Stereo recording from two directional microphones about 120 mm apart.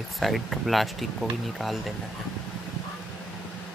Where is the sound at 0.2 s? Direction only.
Centre (ahead or behind).